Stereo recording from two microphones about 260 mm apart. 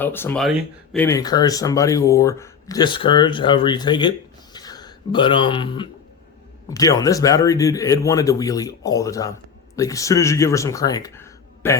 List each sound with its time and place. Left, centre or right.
0.0 s speech: centre